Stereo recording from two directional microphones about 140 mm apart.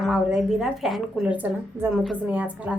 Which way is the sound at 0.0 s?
5° right (ahead or behind).